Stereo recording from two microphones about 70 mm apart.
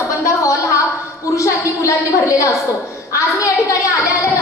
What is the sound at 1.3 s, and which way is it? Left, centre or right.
A woman's voice, left.